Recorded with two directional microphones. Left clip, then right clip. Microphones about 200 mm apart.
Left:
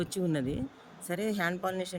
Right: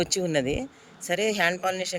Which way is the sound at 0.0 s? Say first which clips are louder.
Right 7 dB; 30° right (ahead or behind).